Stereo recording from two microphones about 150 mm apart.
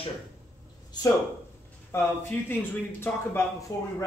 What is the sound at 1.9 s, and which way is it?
Speech, 15° left (ahead or behind).